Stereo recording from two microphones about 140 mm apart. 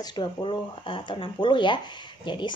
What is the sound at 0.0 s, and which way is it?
Speech, 35° left (ahead or behind).